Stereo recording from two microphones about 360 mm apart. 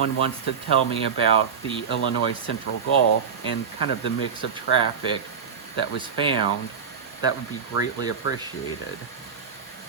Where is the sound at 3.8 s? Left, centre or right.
Left.